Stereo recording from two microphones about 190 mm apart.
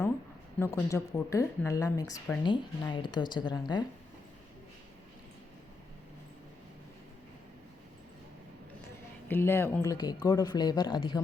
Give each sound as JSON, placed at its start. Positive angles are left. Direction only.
{"t": 0.6, "sound": "speech", "side_deg": 15}
{"t": 2.4, "sound": "speech", "side_deg": 25}
{"t": 9.3, "sound": "speech", "side_deg": 10}